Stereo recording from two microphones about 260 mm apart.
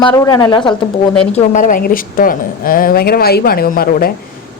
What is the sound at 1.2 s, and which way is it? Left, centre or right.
A woman's voice, left.